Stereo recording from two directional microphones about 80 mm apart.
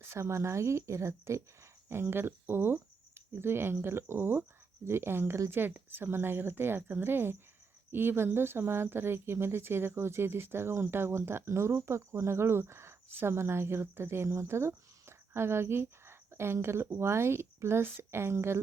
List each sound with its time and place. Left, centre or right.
0.0 s a woman's voice: right